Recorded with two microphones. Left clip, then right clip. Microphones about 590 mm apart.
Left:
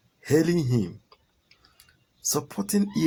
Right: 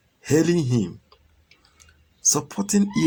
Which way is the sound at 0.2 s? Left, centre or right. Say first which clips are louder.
Right 3 dB; left.